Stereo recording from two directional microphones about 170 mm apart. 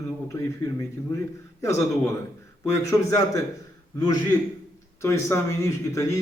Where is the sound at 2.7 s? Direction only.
20° left (ahead or behind).